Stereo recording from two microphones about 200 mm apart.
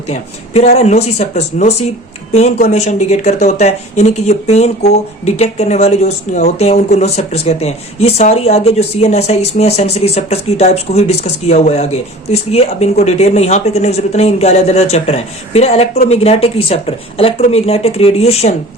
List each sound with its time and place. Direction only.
0.1 s speech: 35° left (ahead or behind)